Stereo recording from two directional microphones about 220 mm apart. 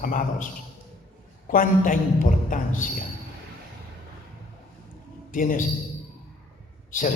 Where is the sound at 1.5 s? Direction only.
40° left (ahead or behind).